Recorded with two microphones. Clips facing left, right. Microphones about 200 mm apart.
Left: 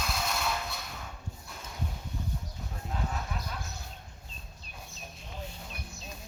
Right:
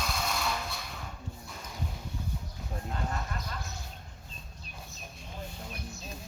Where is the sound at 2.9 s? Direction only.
5° left (ahead or behind).